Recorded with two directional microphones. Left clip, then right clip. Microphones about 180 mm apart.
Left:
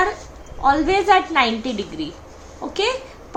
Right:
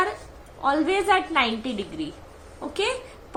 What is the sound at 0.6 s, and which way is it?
A woman's voice, 15° right (ahead or behind).